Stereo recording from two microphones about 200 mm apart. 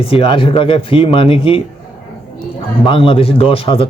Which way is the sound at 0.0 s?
30° left (ahead or behind).